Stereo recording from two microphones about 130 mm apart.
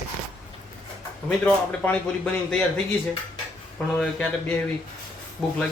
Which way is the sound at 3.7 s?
Centre (ahead or behind).